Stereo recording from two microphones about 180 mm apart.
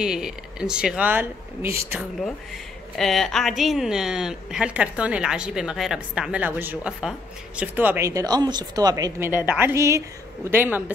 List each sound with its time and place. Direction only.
0.0 s speech: 5° right (ahead or behind)
3.0 s speech: centre (ahead or behind)